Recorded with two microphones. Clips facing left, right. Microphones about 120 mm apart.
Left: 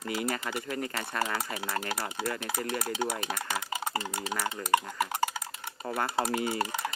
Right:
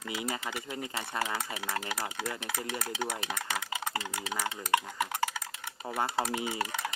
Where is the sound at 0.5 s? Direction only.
15° right (ahead or behind).